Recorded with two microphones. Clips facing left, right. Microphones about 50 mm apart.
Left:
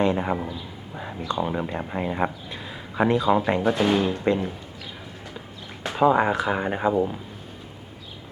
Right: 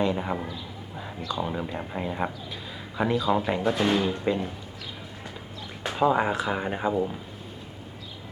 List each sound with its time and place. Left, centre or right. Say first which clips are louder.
0.0 s speech: left 4 dB; centre
0.4 s a sound: left 2 dB; centre
1.4 s speech: left 4 dB; centre
5.9 s speech: left 4 dB; centre